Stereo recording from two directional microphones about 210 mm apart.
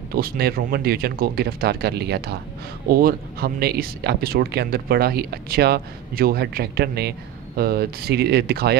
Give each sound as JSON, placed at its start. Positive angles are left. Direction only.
{"t": 0.1, "sound": "speech", "side_deg": -45}